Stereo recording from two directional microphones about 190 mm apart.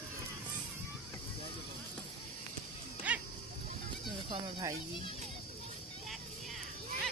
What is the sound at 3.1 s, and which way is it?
Dog, 10° right (ahead or behind).